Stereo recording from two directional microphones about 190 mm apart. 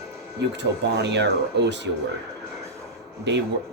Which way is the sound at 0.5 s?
65° right (ahead or behind).